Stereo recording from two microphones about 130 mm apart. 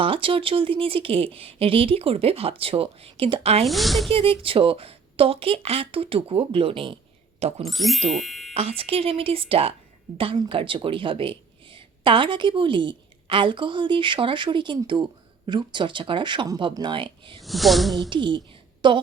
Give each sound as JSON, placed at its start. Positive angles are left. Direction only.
{"t": 0.0, "sound": "a woman's voice", "side_deg": -45}
{"t": 3.7, "sound": "speech", "side_deg": 0}
{"t": 4.1, "sound": "a woman's voice", "side_deg": -45}
{"t": 7.7, "sound": "speech", "side_deg": 0}
{"t": 8.5, "sound": "a woman's voice", "side_deg": -50}
{"t": 17.4, "sound": "speech", "side_deg": 0}
{"t": 18.1, "sound": "a woman's voice", "side_deg": -40}